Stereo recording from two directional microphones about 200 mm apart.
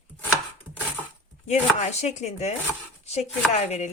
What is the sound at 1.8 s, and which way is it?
Chopping, 35° left (ahead or behind).